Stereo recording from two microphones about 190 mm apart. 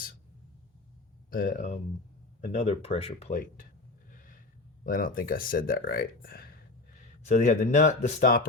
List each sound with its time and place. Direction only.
1.3 s speech: 45° left (ahead or behind)
4.1 s gasp: 45° left (ahead or behind)
4.8 s speech: 45° left (ahead or behind)
7.3 s speech: 40° left (ahead or behind)